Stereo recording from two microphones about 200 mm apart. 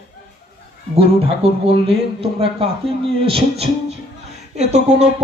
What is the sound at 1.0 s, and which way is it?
Speech, 30° right (ahead or behind).